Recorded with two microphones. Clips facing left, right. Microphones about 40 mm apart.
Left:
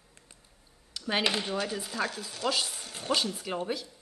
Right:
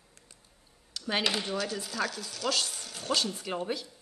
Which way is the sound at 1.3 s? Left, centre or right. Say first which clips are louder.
Left 1 dB; left.